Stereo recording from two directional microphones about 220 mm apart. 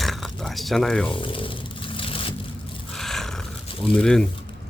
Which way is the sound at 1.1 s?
20° left (ahead or behind).